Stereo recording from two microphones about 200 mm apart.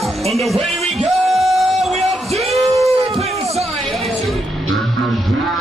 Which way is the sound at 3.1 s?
30° right (ahead or behind).